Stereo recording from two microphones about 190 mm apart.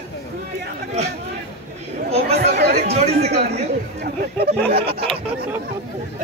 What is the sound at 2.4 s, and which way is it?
Chatter, 60° right (ahead or behind).